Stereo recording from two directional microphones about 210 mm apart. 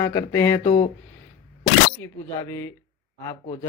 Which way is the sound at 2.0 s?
10° left (ahead or behind).